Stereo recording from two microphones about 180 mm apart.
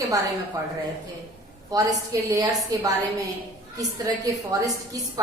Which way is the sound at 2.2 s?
20° right (ahead or behind).